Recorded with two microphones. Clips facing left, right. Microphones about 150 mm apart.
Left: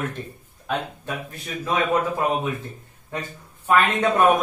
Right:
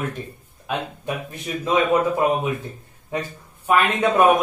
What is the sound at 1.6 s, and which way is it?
Speech, 20° right (ahead or behind).